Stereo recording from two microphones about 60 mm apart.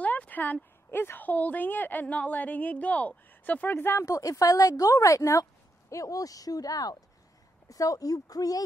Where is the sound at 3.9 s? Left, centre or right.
Left.